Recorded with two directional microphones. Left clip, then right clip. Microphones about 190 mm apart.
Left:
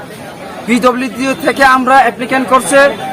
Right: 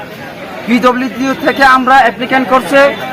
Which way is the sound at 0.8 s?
30° left (ahead or behind).